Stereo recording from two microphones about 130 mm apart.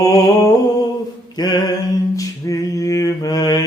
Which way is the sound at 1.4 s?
30° left (ahead or behind).